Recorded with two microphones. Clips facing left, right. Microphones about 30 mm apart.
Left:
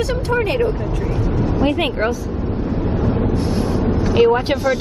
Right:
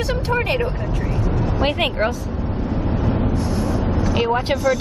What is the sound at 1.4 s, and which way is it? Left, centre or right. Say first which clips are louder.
Vehicle: left 3 dB; right.